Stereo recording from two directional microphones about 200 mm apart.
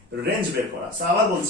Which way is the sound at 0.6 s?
45° right (ahead or behind).